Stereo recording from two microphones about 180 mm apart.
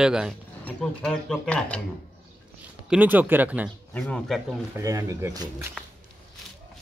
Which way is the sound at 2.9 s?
10° right (ahead or behind).